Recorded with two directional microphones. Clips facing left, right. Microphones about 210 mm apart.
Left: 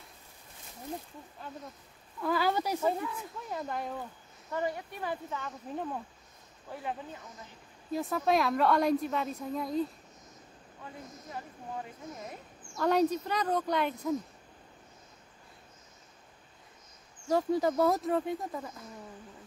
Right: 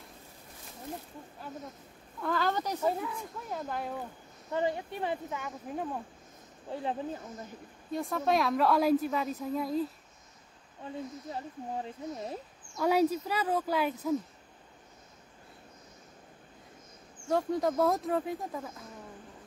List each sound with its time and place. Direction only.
2.2 s a woman's voice: 5° left (ahead or behind)
4.5 s speech: 25° right (ahead or behind)
5.3 s speech: 10° right (ahead or behind)
6.7 s speech: 30° right (ahead or behind)
7.9 s a woman's voice: centre (ahead or behind)
11.3 s speech: 30° right (ahead or behind)
12.7 s speech: 10° right (ahead or behind)
17.3 s a woman's voice: centre (ahead or behind)